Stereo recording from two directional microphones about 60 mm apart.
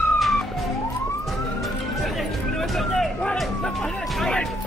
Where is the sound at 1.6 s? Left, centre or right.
Centre.